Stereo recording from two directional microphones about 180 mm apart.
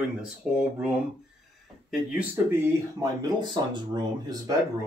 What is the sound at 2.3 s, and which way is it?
Speech, 15° right (ahead or behind).